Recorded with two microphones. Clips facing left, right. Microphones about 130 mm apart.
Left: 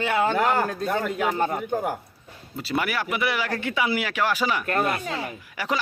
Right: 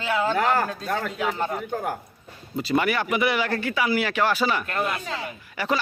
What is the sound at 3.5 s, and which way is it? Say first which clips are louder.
Speech: right 1 dB; 20° left (ahead or behind).